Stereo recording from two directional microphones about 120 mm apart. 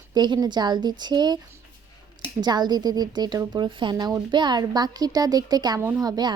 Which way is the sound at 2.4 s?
35° right (ahead or behind).